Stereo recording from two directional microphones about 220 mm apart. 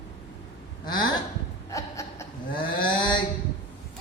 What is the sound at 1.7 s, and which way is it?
Chuckle, 15° left (ahead or behind).